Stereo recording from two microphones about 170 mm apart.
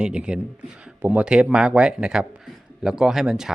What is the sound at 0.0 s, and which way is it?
Speech, 5° right (ahead or behind).